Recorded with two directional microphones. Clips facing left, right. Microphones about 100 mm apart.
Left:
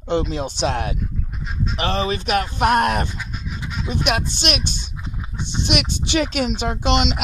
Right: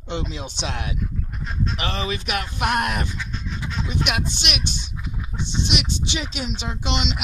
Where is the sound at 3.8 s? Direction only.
40° left (ahead or behind).